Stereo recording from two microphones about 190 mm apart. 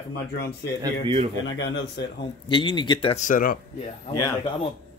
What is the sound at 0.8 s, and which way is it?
Speech, 30° right (ahead or behind).